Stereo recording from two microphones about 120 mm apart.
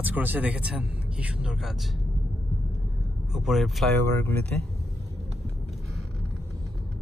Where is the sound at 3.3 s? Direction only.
Centre (ahead or behind).